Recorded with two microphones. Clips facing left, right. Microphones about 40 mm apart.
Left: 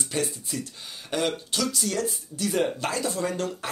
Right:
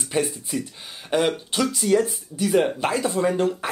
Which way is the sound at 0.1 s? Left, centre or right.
Centre.